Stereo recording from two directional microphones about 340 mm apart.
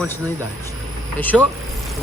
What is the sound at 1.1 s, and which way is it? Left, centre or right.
Speech, centre.